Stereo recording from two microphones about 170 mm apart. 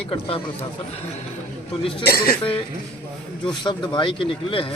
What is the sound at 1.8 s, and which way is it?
Speech, 30° left (ahead or behind).